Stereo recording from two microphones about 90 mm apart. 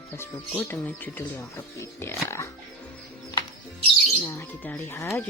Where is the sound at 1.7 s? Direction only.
30° left (ahead or behind).